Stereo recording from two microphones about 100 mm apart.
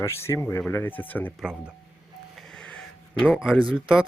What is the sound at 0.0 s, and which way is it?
Speech, 25° left (ahead or behind).